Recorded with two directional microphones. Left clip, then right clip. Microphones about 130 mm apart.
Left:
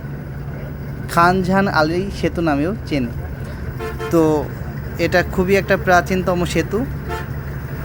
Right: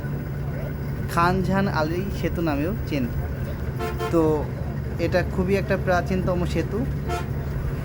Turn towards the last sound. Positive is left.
turn(degrees=30)  # may be behind; listen again after turning